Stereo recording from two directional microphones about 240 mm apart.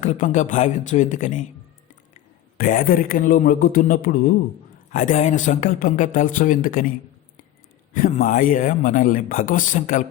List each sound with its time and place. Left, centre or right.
0.0 s speech: left
2.6 s speech: left
7.9 s speech: left